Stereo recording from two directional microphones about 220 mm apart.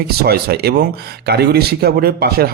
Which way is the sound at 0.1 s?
45° right (ahead or behind).